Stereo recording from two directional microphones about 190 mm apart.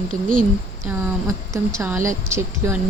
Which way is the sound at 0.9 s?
10° right (ahead or behind).